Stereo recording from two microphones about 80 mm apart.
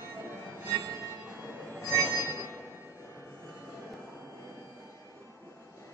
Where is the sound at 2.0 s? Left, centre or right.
Right.